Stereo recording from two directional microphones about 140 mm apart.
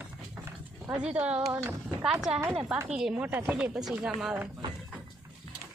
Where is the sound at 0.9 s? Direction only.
10° right (ahead or behind).